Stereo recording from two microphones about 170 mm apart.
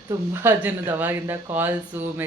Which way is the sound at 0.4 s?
10° right (ahead or behind).